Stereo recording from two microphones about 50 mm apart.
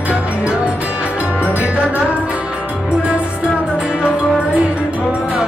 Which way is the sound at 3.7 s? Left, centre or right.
Centre.